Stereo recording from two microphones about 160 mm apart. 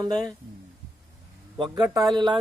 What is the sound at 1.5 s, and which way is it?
Speech, 30° right (ahead or behind).